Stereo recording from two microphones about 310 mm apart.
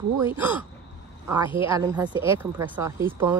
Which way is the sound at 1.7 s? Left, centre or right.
Centre.